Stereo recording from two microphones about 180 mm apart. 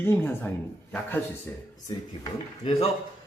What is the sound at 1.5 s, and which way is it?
A man's voice, 10° left (ahead or behind).